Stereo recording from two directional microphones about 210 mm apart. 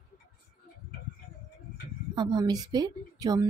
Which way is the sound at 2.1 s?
20° right (ahead or behind).